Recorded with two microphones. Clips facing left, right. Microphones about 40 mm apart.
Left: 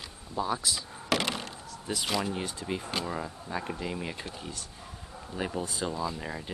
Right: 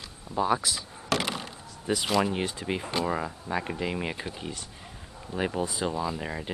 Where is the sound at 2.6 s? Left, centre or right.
Right.